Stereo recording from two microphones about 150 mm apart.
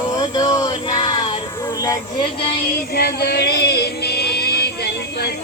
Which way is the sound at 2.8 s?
90° left.